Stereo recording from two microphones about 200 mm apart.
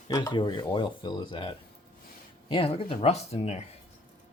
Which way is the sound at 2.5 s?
25° left (ahead or behind).